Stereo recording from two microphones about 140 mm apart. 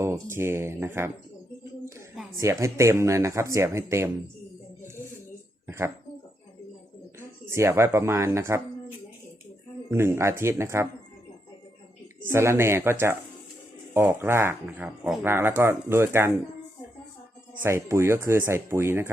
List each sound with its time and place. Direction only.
0.0 s speech: 20° right (ahead or behind)
2.4 s speech: 20° right (ahead or behind)
5.6 s a sound: 20° right (ahead or behind)
7.2 s speech: 20° right (ahead or behind)
9.9 s speech: 20° right (ahead or behind)
12.3 s speech: 20° right (ahead or behind)
17.6 s speech: 20° right (ahead or behind)